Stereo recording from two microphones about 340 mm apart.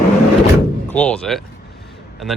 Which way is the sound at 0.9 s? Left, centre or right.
Centre.